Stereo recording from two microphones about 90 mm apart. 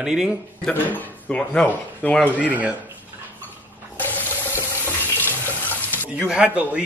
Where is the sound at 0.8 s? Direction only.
15° left (ahead or behind).